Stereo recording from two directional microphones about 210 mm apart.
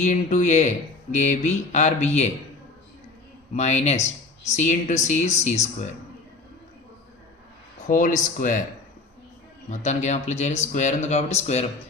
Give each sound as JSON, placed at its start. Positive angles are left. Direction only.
{"t": 0.0, "sound": "speech", "side_deg": 35}
{"t": 3.5, "sound": "speech", "side_deg": 35}
{"t": 7.9, "sound": "speech", "side_deg": 40}
{"t": 9.6, "sound": "speech", "side_deg": 35}